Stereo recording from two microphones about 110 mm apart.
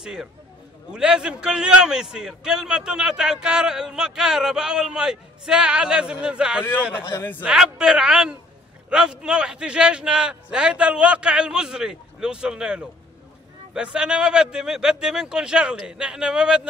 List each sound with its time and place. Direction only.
0.0 s a man's voice: 5° right (ahead or behind)
7.0 s a man's voice: 20° left (ahead or behind)
7.4 s a man's voice: 5° right (ahead or behind)